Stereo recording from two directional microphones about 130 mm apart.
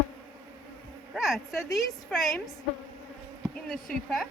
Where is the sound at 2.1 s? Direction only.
5° left (ahead or behind).